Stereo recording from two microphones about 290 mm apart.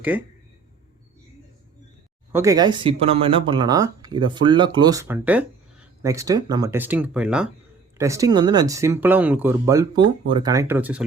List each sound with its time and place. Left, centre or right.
0.1 s speech: centre
2.3 s speech: centre